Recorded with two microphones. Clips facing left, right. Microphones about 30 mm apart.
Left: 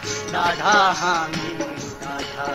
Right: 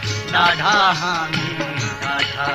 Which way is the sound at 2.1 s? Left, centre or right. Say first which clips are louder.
Right 6 dB; right.